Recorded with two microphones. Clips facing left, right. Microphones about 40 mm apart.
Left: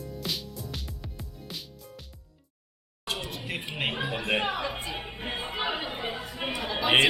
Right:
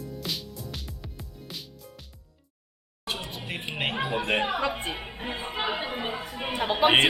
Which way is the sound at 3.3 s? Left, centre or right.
Right.